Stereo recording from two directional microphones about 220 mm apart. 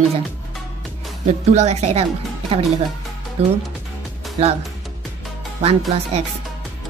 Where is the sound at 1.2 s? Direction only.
30° right (ahead or behind).